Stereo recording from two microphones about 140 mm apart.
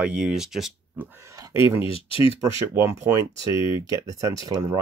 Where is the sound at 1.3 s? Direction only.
20° right (ahead or behind).